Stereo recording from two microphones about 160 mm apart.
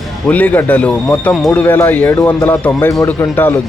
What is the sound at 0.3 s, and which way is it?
Speech, 10° left (ahead or behind).